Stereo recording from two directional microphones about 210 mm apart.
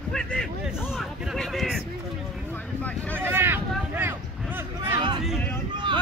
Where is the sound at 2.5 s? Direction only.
5° left (ahead or behind).